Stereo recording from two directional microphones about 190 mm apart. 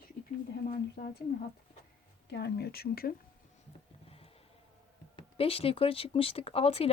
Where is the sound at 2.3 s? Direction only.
60° left (ahead or behind).